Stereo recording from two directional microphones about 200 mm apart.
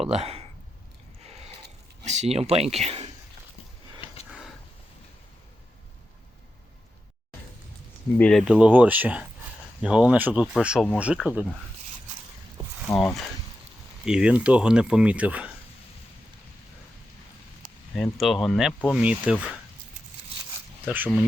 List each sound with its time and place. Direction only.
0.1 s speech: 30° right (ahead or behind)
2.0 s speech: 35° right (ahead or behind)
8.2 s speech: centre (ahead or behind)
12.9 s speech: 10° left (ahead or behind)
14.0 s speech: 5° right (ahead or behind)
17.9 s speech: centre (ahead or behind)
20.8 s speech: 10° right (ahead or behind)